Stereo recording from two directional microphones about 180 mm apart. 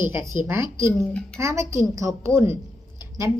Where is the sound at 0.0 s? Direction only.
15° right (ahead or behind).